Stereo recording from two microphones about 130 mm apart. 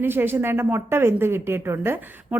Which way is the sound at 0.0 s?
15° right (ahead or behind).